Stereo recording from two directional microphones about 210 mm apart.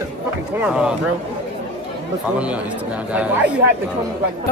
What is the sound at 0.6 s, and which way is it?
Speech, 5° right (ahead or behind).